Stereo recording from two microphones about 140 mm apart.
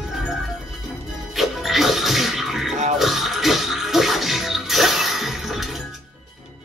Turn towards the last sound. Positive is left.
turn(degrees=0)  # may be behind; listen again after turning